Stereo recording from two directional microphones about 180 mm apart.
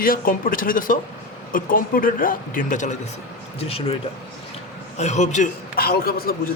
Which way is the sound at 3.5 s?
35° left (ahead or behind).